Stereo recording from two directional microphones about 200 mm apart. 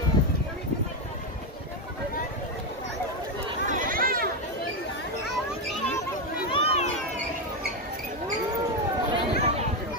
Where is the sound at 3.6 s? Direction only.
40° right (ahead or behind).